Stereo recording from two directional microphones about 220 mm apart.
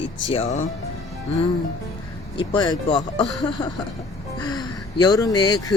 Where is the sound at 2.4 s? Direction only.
20° left (ahead or behind).